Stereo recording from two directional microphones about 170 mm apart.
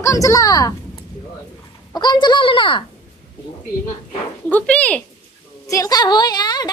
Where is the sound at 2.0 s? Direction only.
25° left (ahead or behind).